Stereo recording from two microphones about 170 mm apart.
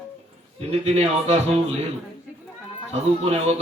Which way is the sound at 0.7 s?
40° right (ahead or behind).